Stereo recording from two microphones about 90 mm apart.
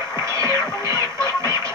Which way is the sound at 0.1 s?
35° right (ahead or behind).